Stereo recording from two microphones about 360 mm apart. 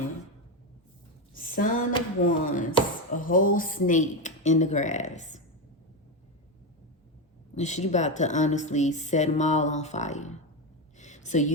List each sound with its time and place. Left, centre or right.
1.3 s a woman's voice: left
7.5 s a woman's voice: centre
10.9 s a sound: centre